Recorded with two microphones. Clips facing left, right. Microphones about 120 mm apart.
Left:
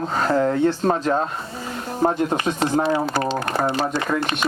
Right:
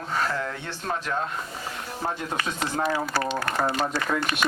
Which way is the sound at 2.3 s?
25° left (ahead or behind).